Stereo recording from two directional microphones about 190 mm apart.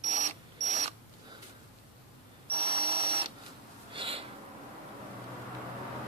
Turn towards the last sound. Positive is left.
turn(degrees=-30)  # may be behind; listen again after turning